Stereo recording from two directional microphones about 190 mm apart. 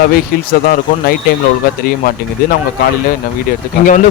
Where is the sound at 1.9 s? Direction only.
50° left (ahead or behind).